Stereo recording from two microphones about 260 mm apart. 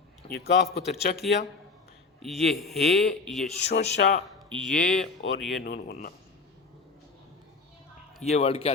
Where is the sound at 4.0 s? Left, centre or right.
Left.